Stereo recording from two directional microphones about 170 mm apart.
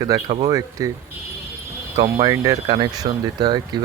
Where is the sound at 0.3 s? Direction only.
35° right (ahead or behind).